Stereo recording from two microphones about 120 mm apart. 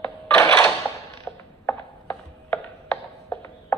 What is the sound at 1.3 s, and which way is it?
Mechanisms, 15° left (ahead or behind).